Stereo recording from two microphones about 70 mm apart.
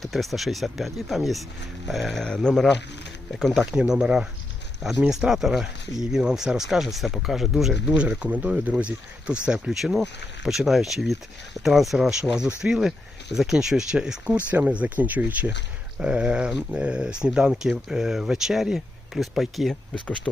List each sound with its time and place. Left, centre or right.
0.0 s speech: centre
3.7 s speech: centre
8.2 s speech: centre
12.6 s speech: centre
13.3 s speech: centre
20.3 s speech: centre